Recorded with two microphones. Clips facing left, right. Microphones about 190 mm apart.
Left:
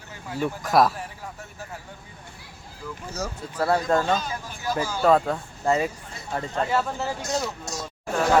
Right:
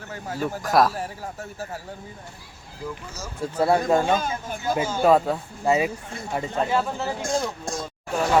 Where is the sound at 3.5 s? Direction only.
15° right (ahead or behind).